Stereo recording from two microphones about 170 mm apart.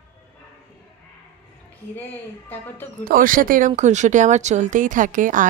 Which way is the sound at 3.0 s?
55° right (ahead or behind).